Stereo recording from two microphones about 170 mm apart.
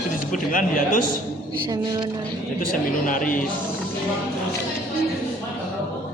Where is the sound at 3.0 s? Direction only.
50° left (ahead or behind).